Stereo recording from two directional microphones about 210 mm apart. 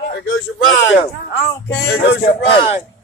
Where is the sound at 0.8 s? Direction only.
55° left (ahead or behind).